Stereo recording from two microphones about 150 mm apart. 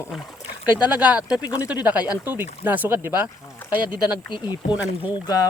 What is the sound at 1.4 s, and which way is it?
Speech, 25° left (ahead or behind).